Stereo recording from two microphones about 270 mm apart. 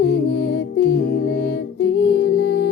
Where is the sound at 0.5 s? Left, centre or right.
Left.